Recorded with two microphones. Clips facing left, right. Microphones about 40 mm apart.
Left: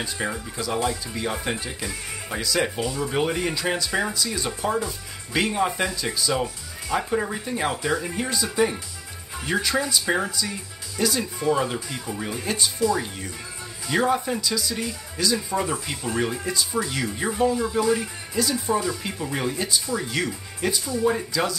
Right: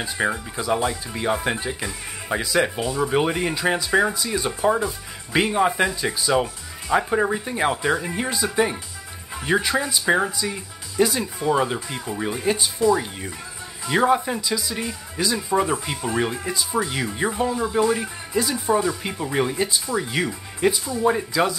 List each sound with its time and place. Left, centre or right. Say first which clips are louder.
0.0 s speech: right 4 dB; centre
9.5 s speech: right 2 dB; centre